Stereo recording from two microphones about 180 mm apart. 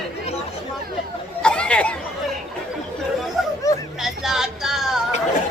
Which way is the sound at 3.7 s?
20° left (ahead or behind).